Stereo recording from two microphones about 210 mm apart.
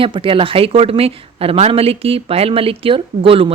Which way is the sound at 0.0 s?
25° right (ahead or behind).